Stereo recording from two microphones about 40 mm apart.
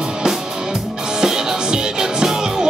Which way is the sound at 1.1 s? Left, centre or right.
Centre.